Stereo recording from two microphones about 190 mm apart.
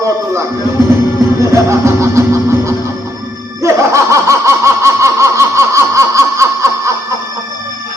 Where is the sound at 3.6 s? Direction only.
15° right (ahead or behind).